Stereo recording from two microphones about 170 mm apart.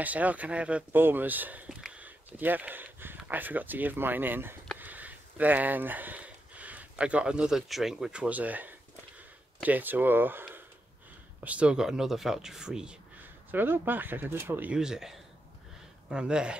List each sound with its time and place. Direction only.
0.0 s speech: 10° right (ahead or behind)